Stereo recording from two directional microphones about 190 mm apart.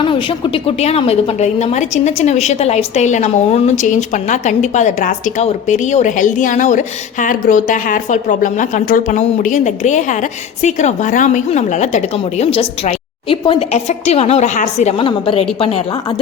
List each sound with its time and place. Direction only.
0.0 s a woman's voice: 25° left (ahead or behind)